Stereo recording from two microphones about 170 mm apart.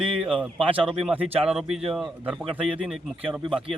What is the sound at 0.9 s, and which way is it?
Speech, 5° right (ahead or behind).